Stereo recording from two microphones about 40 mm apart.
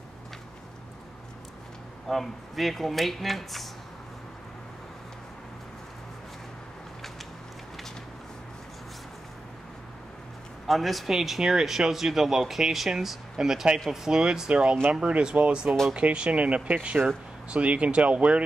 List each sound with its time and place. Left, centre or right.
2.0 s speech: centre
10.7 s speech: centre
14.5 s speech: right